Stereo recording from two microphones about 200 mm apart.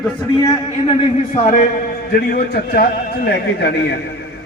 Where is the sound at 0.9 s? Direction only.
35° left (ahead or behind).